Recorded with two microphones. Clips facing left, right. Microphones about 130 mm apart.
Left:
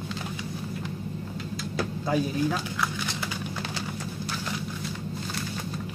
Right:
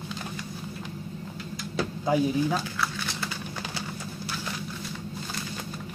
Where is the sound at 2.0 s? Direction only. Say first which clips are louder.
Right 2 dB; 15° right (ahead or behind).